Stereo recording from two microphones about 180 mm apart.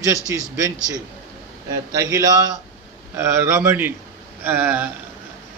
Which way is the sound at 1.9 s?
20° right (ahead or behind).